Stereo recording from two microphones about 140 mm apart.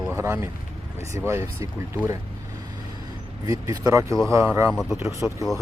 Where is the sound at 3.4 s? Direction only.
25° right (ahead or behind).